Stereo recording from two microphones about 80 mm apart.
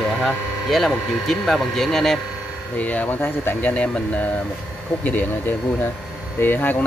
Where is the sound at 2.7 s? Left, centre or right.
Centre.